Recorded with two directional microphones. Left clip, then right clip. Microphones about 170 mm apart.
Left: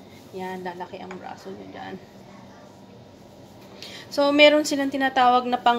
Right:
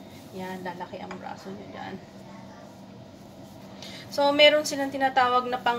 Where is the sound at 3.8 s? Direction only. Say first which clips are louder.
Left 2 dB; 45° left (ahead or behind).